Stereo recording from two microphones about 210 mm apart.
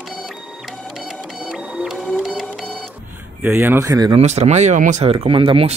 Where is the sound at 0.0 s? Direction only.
Centre (ahead or behind).